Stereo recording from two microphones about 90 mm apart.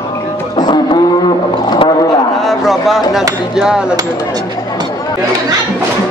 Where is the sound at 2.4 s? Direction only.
Centre (ahead or behind).